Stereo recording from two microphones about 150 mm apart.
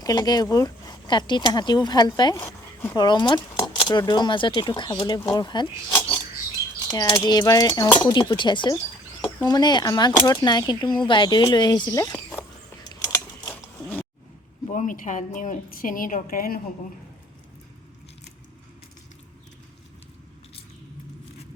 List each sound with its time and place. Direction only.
0.0 s speech: 25° left (ahead or behind)
6.9 s speech: 30° left (ahead or behind)
12.8 s mechanisms: 25° left (ahead or behind)
14.7 s a woman's voice: 60° left (ahead or behind)